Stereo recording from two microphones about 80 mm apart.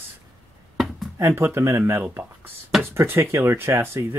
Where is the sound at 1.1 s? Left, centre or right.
Right.